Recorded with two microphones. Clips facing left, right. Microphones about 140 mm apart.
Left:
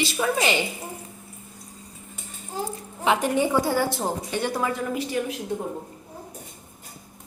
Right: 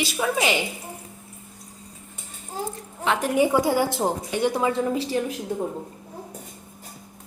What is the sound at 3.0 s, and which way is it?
A woman's voice, centre (ahead or behind).